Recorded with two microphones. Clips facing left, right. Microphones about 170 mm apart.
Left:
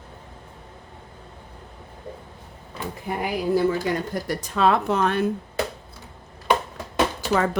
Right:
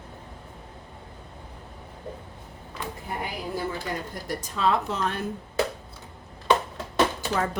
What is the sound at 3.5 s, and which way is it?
Speech, 80° left.